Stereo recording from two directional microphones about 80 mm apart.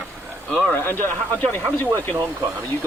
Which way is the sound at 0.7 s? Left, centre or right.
Left.